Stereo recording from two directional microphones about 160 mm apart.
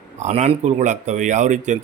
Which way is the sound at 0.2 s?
50° right (ahead or behind).